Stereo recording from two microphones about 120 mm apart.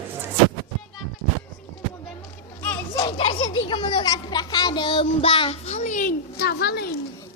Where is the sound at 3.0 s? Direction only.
50° left (ahead or behind).